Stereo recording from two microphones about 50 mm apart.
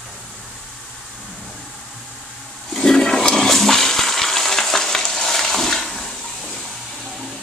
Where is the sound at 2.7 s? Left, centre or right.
Centre.